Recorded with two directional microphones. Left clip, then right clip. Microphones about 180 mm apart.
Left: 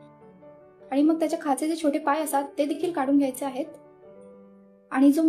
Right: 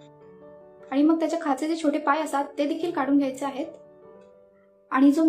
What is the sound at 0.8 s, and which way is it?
A woman's voice, 40° left (ahead or behind).